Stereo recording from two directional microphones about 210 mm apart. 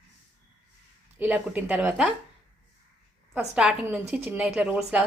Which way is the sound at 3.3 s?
5° right (ahead or behind).